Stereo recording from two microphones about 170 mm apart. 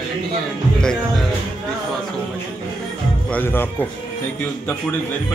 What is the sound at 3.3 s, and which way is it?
Speech, 10° left (ahead or behind).